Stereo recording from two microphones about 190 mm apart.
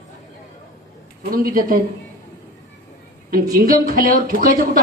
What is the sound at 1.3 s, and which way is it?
Speech, 50° right (ahead or behind).